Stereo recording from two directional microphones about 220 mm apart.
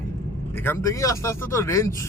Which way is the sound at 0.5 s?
10° left (ahead or behind).